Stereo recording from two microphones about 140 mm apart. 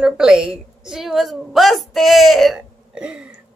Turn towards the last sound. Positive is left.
turn(degrees=-5)  # may be behind; listen again after turning